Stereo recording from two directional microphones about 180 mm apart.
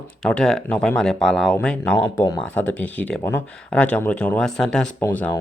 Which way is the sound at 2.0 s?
20° left (ahead or behind).